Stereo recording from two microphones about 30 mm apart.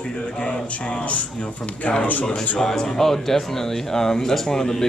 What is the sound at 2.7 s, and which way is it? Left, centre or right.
A man's voice, centre.